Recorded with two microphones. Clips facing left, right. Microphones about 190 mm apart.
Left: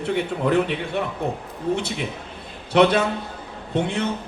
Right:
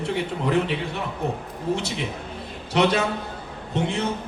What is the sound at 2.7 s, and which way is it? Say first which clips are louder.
Speech: left 4 dB; 60° left (ahead or behind).